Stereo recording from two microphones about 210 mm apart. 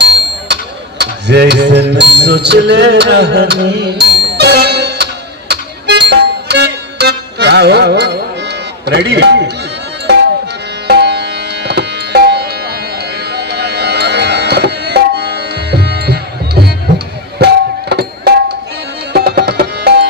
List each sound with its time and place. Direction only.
0.0 s a sound: 55° right (ahead or behind)
5.5 s music: 55° right (ahead or behind)
8.9 s speech: 55° right (ahead or behind)
10.8 s music: 50° right (ahead or behind)
17.3 s music: 50° right (ahead or behind)